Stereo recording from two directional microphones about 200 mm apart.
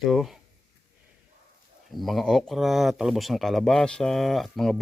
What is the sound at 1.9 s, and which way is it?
Speech, centre (ahead or behind).